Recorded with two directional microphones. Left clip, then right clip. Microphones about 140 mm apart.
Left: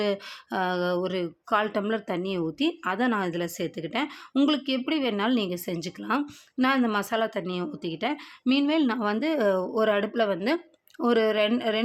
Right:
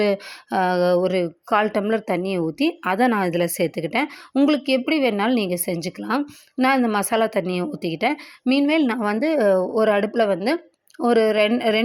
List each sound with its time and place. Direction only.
0.0 s speech: 25° right (ahead or behind)